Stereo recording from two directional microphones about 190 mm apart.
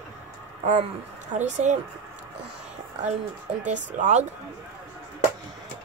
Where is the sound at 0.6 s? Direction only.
40° right (ahead or behind).